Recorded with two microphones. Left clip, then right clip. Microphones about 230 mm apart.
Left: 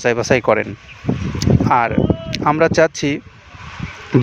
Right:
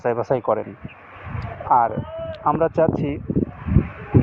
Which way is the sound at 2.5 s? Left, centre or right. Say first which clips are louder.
Left 5 dB; left.